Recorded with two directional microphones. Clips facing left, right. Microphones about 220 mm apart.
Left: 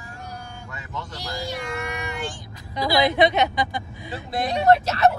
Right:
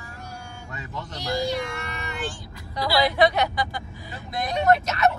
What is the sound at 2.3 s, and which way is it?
A woman's voice, 15° left (ahead or behind).